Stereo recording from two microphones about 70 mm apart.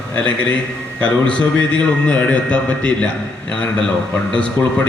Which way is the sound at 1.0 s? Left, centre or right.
Centre.